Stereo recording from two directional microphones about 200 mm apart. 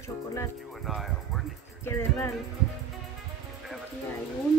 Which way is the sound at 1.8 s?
15° left (ahead or behind).